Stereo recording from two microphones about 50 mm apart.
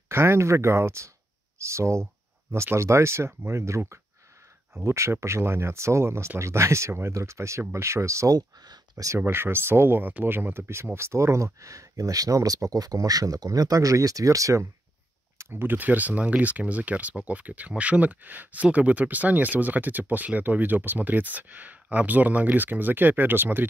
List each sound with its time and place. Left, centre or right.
0.1 s speech: right
4.8 s speech: right
9.2 s speech: right
11.0 s speech: right
15.5 s speech: right